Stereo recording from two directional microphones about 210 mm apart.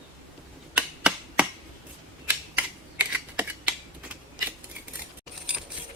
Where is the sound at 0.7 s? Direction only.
5° right (ahead or behind).